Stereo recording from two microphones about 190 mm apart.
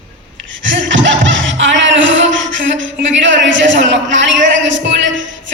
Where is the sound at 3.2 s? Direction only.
75° right (ahead or behind).